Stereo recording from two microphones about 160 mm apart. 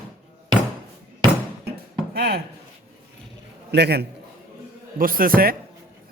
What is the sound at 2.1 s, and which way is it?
Speech, 90° right.